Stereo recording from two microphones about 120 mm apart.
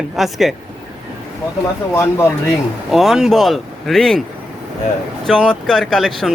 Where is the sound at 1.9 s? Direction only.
20° left (ahead or behind).